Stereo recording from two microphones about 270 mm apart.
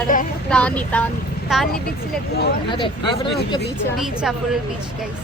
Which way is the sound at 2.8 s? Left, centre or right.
Centre.